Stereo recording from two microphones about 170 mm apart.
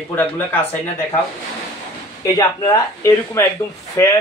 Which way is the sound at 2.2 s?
20° left (ahead or behind).